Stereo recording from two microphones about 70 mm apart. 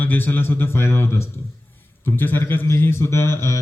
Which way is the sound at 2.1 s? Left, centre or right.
Left.